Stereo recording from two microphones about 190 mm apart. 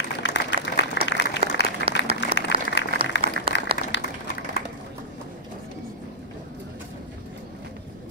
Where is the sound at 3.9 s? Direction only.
70° left (ahead or behind).